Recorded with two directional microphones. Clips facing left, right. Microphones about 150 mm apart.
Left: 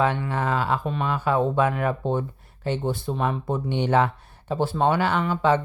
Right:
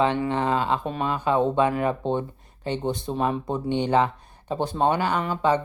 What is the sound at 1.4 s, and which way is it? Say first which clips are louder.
Speech: right 1 dB; 5° left (ahead or behind).